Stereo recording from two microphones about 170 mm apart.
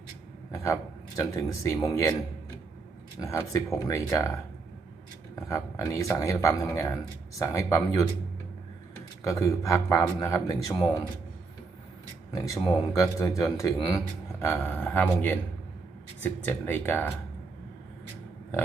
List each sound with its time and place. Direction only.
0.5 s speech: 20° left (ahead or behind)
3.2 s speech: 20° left (ahead or behind)
5.5 s speech: 15° left (ahead or behind)
9.2 s speech: 20° left (ahead or behind)
13.0 s speech: 20° left (ahead or behind)